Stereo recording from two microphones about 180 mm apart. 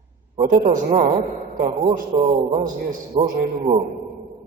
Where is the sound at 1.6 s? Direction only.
35° right (ahead or behind).